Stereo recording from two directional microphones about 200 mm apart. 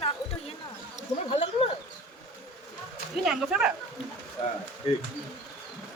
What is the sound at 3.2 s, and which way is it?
Speech, 5° right (ahead or behind).